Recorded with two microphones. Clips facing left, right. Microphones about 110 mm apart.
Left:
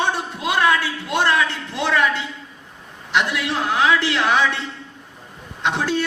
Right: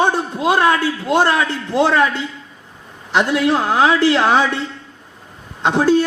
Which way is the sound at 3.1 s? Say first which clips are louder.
Right 6 dB; 40° right (ahead or behind).